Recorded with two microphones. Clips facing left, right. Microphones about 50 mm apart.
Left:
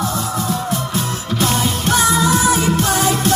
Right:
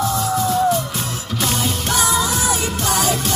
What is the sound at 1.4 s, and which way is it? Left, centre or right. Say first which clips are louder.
Music: left 3 dB; left.